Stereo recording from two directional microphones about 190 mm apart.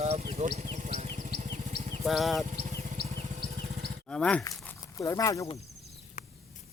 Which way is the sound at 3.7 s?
55° right (ahead or behind).